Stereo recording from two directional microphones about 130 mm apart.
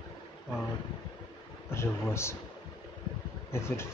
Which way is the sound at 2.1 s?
20° left (ahead or behind).